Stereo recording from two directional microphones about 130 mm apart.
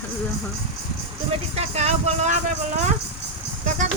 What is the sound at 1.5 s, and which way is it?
Speech, 55° right (ahead or behind).